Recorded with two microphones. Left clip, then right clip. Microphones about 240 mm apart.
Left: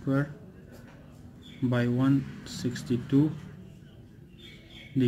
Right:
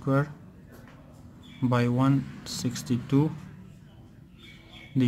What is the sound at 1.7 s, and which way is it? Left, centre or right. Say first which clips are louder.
Speech: right 2 dB; right.